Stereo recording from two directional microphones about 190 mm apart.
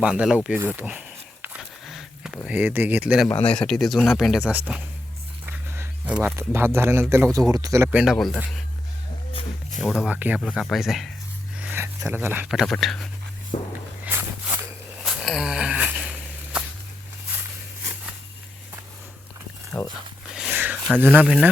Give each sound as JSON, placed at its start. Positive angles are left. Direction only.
{"t": 0.0, "sound": "a man's voice", "side_deg": -5}
{"t": 0.8, "sound": "a sound", "side_deg": -10}
{"t": 3.2, "sound": "a man's voice", "side_deg": 10}
{"t": 7.9, "sound": "speech", "side_deg": -5}
{"t": 9.3, "sound": "a sound", "side_deg": 30}
{"t": 9.8, "sound": "speech", "side_deg": 0}
{"t": 13.5, "sound": "walk", "side_deg": 30}
{"t": 14.0, "sound": "a sound", "side_deg": -10}
{"t": 15.0, "sound": "wheeze", "side_deg": 0}
{"t": 19.7, "sound": "speech", "side_deg": 20}
{"t": 20.3, "sound": "a sound", "side_deg": -5}
{"t": 21.0, "sound": "a man's voice", "side_deg": -10}